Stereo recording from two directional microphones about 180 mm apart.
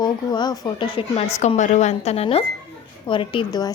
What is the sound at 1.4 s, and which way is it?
A woman's voice, 40° left (ahead or behind).